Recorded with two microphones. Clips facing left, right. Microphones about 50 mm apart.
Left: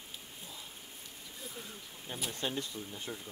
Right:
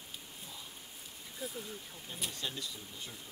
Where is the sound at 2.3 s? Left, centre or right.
Left.